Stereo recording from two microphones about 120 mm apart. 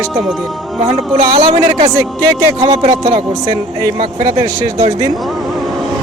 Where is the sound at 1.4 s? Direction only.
45° right (ahead or behind).